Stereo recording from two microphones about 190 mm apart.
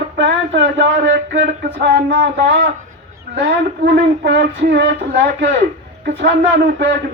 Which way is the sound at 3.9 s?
65° right (ahead or behind).